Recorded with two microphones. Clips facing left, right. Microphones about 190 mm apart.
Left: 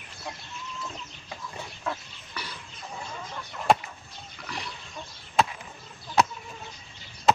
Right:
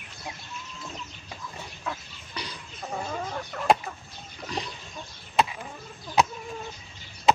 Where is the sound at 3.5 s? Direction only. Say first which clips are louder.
Right 2 dB; 60° right (ahead or behind).